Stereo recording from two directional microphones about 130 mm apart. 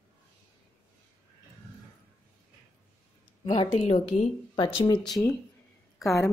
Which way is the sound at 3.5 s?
50° left (ahead or behind).